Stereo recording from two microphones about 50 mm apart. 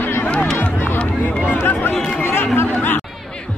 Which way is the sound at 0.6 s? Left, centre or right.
Left.